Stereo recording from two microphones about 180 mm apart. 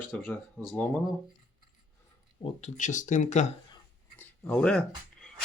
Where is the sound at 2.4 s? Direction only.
40° left (ahead or behind).